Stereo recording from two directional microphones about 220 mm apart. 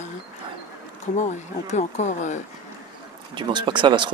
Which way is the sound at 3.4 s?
20° right (ahead or behind).